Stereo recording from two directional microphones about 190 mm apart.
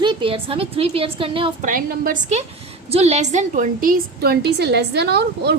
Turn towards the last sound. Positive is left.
turn(degrees=-60)  # may be behind; listen again after turning